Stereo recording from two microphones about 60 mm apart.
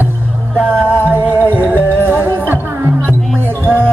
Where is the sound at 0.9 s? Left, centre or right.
Right.